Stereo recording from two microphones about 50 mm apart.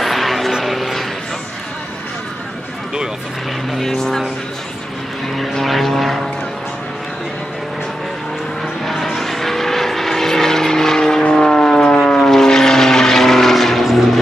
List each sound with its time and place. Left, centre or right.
0.0 s vehicle: centre
0.7 s music: centre
3.7 s vehicle: centre
5.3 s vehicle: centre
8.8 s vehicle: centre